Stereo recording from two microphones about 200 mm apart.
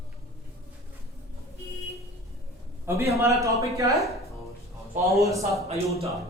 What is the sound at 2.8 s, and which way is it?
A man's voice, 15° right (ahead or behind).